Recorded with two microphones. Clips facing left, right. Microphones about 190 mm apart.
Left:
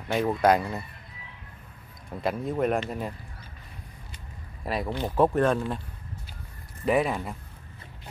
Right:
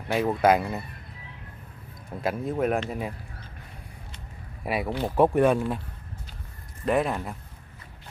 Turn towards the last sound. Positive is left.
turn(degrees=0)  # may be behind; listen again after turning